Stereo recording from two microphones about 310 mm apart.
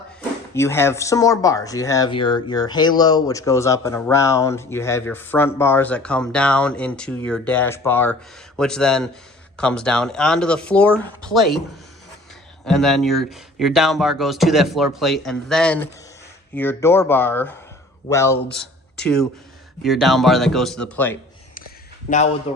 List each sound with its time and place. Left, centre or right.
0.5 s speech: centre
12.6 s speech: centre
22.1 s speech: left